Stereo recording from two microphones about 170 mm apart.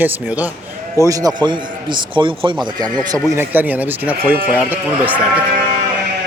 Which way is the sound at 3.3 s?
10° right (ahead or behind).